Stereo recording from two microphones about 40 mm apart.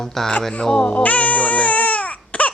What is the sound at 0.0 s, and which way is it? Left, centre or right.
Speech, centre.